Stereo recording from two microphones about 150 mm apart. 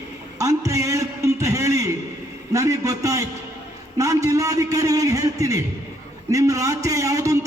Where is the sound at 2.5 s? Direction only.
20° right (ahead or behind).